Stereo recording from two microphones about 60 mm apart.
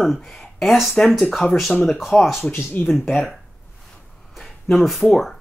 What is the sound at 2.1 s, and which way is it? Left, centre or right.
Speech, centre.